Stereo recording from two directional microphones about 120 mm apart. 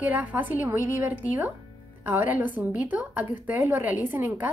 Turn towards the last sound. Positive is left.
turn(degrees=-15)  # may be behind; listen again after turning